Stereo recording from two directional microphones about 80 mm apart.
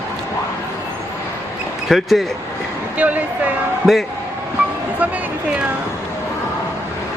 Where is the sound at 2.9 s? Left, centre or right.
Centre.